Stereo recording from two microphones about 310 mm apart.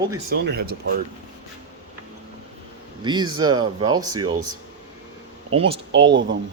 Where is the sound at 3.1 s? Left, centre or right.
Centre.